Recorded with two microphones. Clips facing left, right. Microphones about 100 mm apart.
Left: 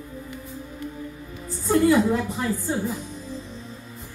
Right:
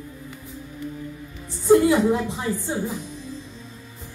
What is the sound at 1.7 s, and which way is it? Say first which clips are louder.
A woman's voice: right 3 dB; 20° right (ahead or behind).